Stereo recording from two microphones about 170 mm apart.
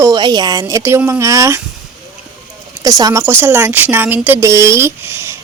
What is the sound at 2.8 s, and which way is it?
A woman's voice, 20° right (ahead or behind).